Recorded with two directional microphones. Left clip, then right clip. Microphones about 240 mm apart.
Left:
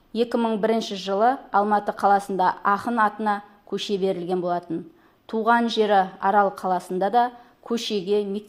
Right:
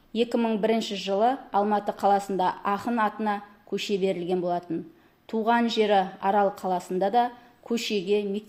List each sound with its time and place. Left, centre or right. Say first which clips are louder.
0.1 s a woman's voice: left 2 dB; centre